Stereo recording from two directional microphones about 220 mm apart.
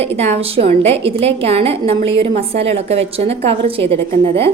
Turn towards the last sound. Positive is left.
turn(degrees=-25)  # may be behind; listen again after turning